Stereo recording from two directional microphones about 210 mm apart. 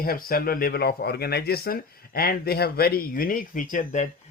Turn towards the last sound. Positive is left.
turn(degrees=35)  # may be behind; listen again after turning